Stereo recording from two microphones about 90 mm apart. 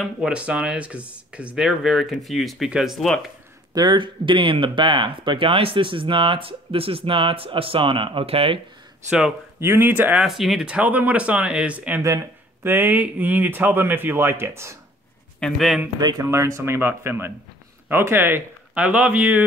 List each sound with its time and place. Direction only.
0.0 s speech: 10° right (ahead or behind)
3.7 s speech: 55° right (ahead or behind); by 8.5 s 90° right
9.6 s speech: 25° right (ahead or behind)
10.2 s speech: centre (ahead or behind); by 14.8 s 30° right (ahead or behind)
15.4 s a man's voice: centre (ahead or behind)
16.0 s speech: 50° right (ahead or behind)
16.3 s speech: 35° right (ahead or behind); by 19.4 s 15° right (ahead or behind)